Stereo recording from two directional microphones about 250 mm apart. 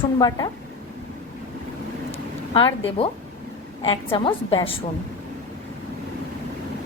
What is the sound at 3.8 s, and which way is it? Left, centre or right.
Speech, left.